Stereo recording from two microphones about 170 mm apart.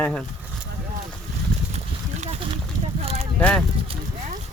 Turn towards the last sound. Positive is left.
turn(degrees=5)  # may be behind; listen again after turning